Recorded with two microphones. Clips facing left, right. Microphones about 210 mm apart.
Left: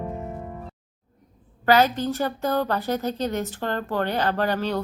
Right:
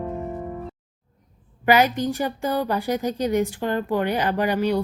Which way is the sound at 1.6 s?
15° right (ahead or behind).